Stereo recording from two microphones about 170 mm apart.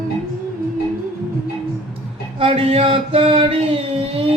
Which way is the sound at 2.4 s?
35° right (ahead or behind).